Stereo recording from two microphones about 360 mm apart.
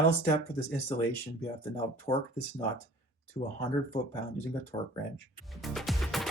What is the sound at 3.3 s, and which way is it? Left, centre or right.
Speech, centre.